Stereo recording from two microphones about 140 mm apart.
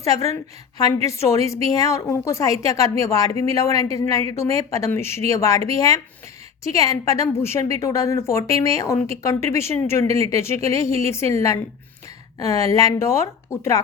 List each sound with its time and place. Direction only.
0.0 s a woman's voice: 25° left (ahead or behind)
12.4 s a woman's voice: 25° left (ahead or behind)